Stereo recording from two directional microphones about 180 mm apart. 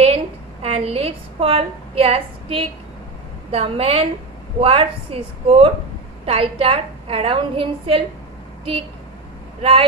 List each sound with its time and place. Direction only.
0.0 s a sound: 35° right (ahead or behind)
3.5 s a woman's voice: 30° right (ahead or behind)
9.6 s speech: 30° right (ahead or behind)